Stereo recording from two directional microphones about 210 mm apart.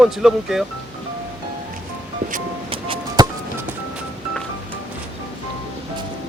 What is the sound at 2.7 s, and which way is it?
Music, 25° right (ahead or behind).